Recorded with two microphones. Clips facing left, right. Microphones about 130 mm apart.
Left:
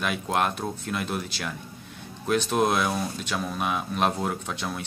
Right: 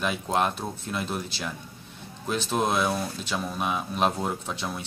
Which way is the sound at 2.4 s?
Centre (ahead or behind).